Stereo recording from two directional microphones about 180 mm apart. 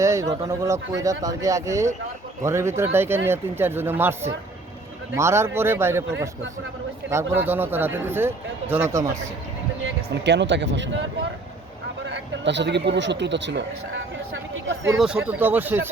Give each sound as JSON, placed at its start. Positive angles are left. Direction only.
{"t": 0.0, "sound": "speech", "side_deg": -15}
{"t": 7.3, "sound": "speech", "side_deg": -10}
{"t": 10.2, "sound": "speech", "side_deg": -75}
{"t": 12.0, "sound": "speech", "side_deg": -80}
{"t": 14.9, "sound": "speech", "side_deg": -5}